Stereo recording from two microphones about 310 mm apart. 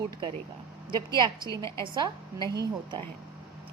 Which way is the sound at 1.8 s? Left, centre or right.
Centre.